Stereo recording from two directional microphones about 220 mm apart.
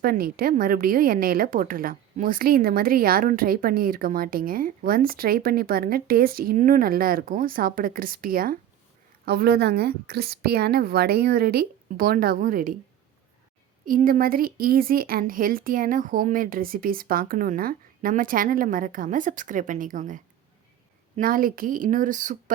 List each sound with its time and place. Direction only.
0.0 s a woman's voice: 40° right (ahead or behind)
13.8 s a woman's voice: 40° right (ahead or behind)